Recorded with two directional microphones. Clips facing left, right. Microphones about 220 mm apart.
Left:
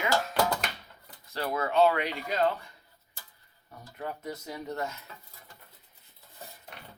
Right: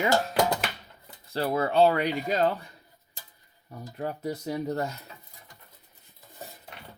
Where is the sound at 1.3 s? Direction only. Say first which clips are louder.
Right 4 dB; 30° right (ahead or behind).